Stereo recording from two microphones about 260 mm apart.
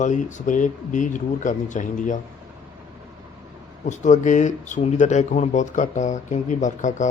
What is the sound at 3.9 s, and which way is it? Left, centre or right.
Speech, left.